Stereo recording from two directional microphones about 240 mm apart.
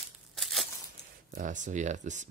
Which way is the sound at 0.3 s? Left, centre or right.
Centre.